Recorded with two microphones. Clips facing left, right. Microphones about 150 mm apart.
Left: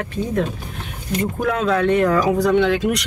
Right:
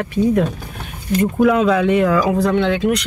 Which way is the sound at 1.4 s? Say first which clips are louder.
Right 4 dB; 5° right (ahead or behind).